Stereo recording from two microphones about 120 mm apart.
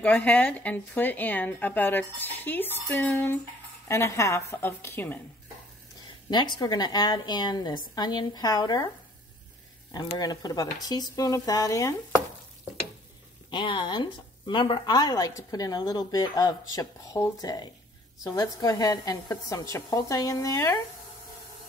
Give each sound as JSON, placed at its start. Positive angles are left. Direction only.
{"t": 0.0, "sound": "a woman's voice", "side_deg": 15}
{"t": 6.3, "sound": "a woman's voice", "side_deg": 40}
{"t": 9.9, "sound": "a woman's voice", "side_deg": 35}
{"t": 13.5, "sound": "a woman's voice", "side_deg": 40}